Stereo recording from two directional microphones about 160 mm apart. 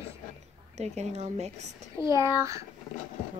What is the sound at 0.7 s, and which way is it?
Speech, 45° right (ahead or behind).